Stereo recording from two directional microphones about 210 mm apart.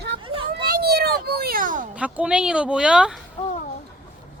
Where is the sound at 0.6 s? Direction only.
50° right (ahead or behind).